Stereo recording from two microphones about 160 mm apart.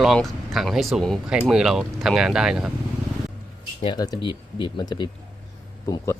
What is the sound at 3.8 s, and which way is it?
Speech, 25° left (ahead or behind).